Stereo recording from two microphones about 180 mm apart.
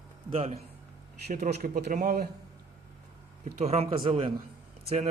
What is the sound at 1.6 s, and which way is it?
Speech, 50° right (ahead or behind).